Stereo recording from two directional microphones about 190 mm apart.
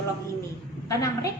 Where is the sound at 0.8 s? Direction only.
15° left (ahead or behind).